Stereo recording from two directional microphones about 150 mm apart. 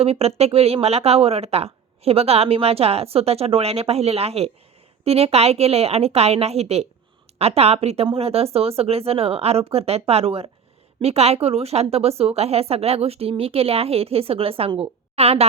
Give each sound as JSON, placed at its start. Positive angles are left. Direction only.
{"t": 0.0, "sound": "a woman's voice", "side_deg": -40}